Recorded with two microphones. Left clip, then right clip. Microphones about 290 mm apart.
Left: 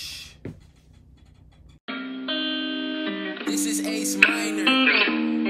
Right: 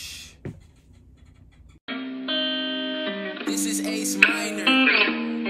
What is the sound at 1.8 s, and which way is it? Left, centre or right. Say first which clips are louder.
Music: even; centre.